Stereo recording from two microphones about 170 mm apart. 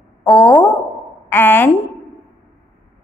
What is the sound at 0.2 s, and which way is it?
A woman's voice, 10° left (ahead or behind).